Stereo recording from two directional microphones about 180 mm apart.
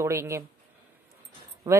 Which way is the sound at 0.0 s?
15° right (ahead or behind).